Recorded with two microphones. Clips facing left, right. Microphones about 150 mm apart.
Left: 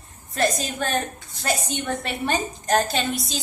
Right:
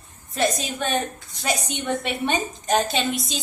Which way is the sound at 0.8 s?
Centre (ahead or behind).